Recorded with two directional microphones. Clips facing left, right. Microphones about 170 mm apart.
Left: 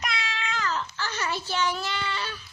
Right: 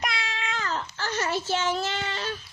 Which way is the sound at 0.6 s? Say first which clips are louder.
Left 2 dB; 40° right (ahead or behind).